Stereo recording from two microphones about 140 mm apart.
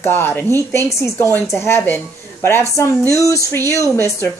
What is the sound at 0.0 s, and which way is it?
Speech, 15° left (ahead or behind).